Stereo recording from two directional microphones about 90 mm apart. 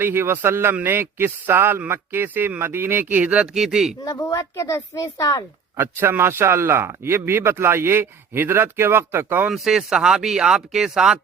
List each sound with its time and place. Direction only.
0.0 s speech: 25° right (ahead or behind); by 3.9 s 5° right (ahead or behind)
4.0 s speech: 40° left (ahead or behind)
5.7 s speech: 25° right (ahead or behind)
9.5 s speech: 5° right (ahead or behind)